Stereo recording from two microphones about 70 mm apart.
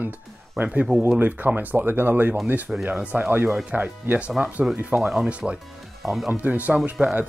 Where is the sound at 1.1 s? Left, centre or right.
Right.